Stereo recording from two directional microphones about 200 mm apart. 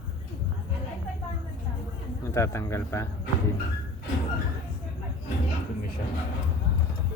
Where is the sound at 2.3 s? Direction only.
15° left (ahead or behind).